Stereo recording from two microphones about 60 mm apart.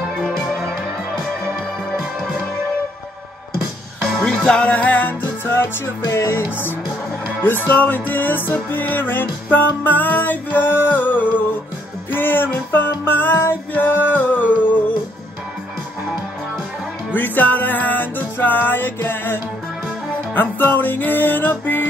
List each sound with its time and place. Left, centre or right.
4.0 s music: centre; by 5.7 s left
6.1 s music: left
7.4 s music: left
17.1 s music: left